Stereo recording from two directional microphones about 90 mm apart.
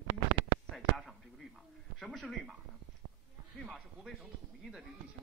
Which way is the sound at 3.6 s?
Centre (ahead or behind).